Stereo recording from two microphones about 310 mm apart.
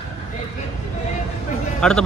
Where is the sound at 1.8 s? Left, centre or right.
Centre.